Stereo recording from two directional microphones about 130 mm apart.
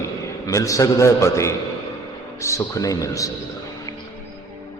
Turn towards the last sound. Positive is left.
turn(degrees=25)  # may be behind; listen again after turning